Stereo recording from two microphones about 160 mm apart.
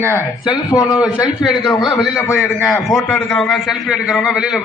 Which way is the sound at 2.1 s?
15° left (ahead or behind).